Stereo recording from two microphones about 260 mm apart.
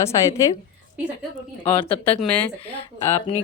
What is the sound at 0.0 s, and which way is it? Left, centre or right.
Speech, centre.